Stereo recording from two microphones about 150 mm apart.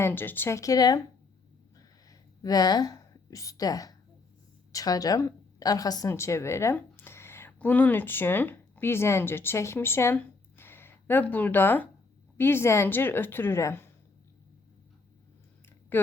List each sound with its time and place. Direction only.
0.0 s a woman's voice: 15° left (ahead or behind)
2.0 s a woman's voice: 25° left (ahead or behind)
15.9 s speech: 15° left (ahead or behind)